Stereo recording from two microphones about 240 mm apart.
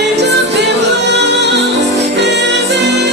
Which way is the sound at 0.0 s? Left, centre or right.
Right.